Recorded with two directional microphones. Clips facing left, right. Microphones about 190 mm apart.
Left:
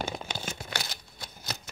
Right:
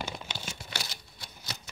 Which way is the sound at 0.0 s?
50° left (ahead or behind).